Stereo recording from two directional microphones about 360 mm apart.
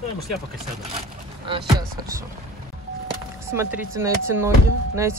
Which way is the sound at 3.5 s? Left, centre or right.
Centre.